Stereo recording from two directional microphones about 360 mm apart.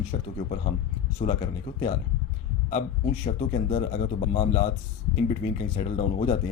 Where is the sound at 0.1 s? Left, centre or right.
Centre.